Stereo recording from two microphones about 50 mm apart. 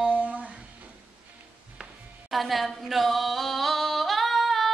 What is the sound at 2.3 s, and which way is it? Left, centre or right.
Singing, centre.